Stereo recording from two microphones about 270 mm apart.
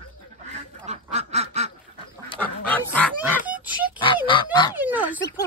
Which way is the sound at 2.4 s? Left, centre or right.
Centre.